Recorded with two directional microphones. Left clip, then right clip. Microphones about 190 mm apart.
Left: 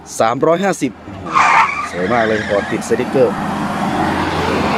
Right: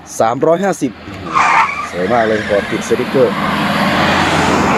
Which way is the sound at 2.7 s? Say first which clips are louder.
Right 1 dB; 30° right (ahead or behind).